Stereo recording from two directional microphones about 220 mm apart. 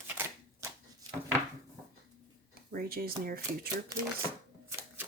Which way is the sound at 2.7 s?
40° right (ahead or behind).